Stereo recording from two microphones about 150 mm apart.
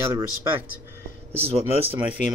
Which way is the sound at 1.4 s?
40° right (ahead or behind).